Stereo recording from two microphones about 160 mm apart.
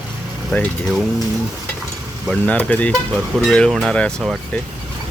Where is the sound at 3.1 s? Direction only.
5° right (ahead or behind).